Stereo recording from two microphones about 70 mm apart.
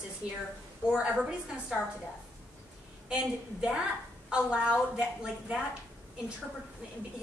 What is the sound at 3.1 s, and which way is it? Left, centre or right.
A woman's voice, centre.